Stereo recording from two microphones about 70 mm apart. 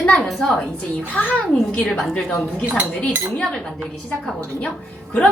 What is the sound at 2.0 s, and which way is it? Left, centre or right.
Speech, centre.